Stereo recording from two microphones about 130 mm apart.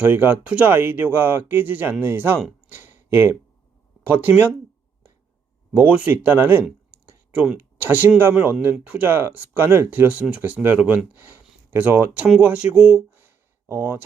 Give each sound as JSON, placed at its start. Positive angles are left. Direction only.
{"t": 0.0, "sound": "speech", "side_deg": -15}
{"t": 2.7, "sound": "a sound", "side_deg": -15}
{"t": 4.0, "sound": "speech", "side_deg": -15}
{"t": 5.7, "sound": "speech", "side_deg": -10}